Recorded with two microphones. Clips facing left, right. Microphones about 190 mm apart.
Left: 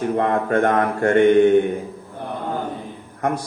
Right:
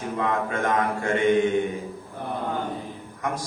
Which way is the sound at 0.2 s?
60° left (ahead or behind).